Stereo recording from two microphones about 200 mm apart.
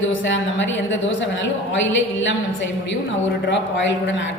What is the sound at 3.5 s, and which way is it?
Speech, 65° left (ahead or behind).